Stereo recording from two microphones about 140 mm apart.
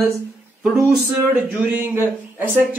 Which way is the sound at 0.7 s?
5° right (ahead or behind).